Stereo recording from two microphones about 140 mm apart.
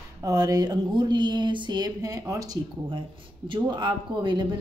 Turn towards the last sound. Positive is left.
turn(degrees=-35)  # may be behind; listen again after turning